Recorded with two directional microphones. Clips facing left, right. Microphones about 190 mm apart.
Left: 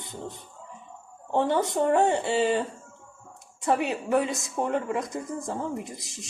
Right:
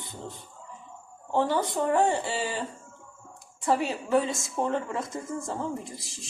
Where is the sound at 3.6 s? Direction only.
20° left (ahead or behind).